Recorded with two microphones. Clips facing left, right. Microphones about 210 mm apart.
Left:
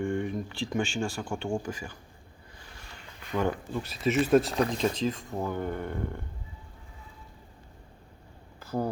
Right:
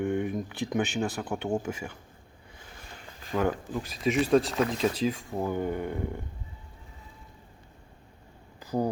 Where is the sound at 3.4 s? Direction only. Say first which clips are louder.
Right 1 dB; 15° right (ahead or behind).